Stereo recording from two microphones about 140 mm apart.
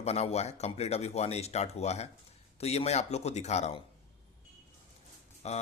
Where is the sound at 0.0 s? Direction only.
50° left (ahead or behind).